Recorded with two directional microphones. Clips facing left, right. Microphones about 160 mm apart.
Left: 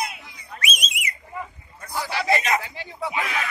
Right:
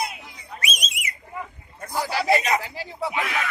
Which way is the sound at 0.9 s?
40° right (ahead or behind).